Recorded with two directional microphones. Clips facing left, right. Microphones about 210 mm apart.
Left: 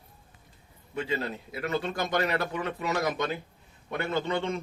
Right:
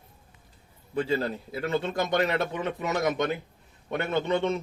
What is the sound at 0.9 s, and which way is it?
A man's voice, 35° right (ahead or behind).